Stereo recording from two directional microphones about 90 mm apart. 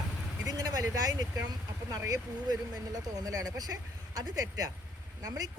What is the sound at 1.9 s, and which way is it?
Speech, 40° right (ahead or behind).